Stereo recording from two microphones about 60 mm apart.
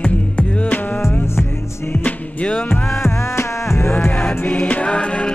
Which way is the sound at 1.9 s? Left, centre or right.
Left.